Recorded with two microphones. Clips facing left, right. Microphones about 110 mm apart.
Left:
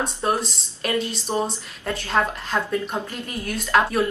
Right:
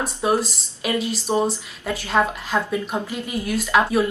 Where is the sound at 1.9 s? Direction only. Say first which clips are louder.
Right 2 dB; 5° right (ahead or behind).